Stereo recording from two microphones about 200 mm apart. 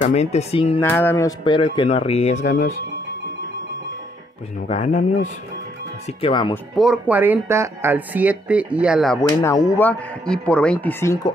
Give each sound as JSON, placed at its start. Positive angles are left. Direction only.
{"t": 0.0, "sound": "speech", "side_deg": 35}
{"t": 0.7, "sound": "speech", "side_deg": 10}
{"t": 4.6, "sound": "speech", "side_deg": 35}
{"t": 6.5, "sound": "speech", "side_deg": 0}
{"t": 9.4, "sound": "speech", "side_deg": 15}